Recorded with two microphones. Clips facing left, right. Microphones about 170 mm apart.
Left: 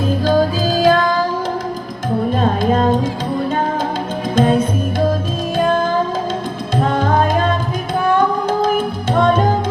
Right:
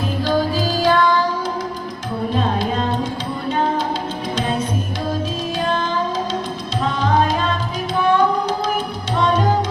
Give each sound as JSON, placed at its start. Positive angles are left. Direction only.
{"t": 0.3, "sound": "music", "side_deg": 45}
{"t": 2.3, "sound": "music", "side_deg": 50}
{"t": 4.4, "sound": "music", "side_deg": 50}